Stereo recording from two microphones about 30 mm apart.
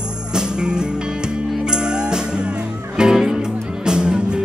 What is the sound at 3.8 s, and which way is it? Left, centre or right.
Music, right.